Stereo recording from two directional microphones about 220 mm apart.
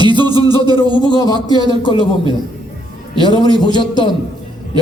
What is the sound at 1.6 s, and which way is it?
Speech, 20° left (ahead or behind).